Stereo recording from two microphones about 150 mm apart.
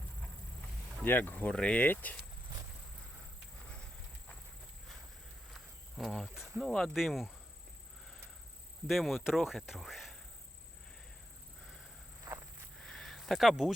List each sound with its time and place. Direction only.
1.0 s speech: 15° left (ahead or behind)
5.5 s cricket: centre (ahead or behind)
6.6 s speech: centre (ahead or behind)
8.9 s speech: centre (ahead or behind)
12.3 s walk: 15° right (ahead or behind)
12.8 s a sound: centre (ahead or behind)